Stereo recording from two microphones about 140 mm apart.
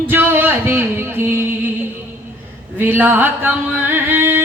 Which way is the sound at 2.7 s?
15° right (ahead or behind).